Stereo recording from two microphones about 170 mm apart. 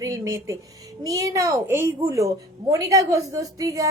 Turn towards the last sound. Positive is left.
turn(degrees=-20)  # may be behind; listen again after turning